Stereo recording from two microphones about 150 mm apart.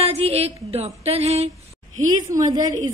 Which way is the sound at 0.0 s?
40° right (ahead or behind).